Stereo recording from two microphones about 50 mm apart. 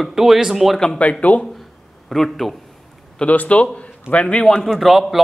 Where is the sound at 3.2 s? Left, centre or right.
Left.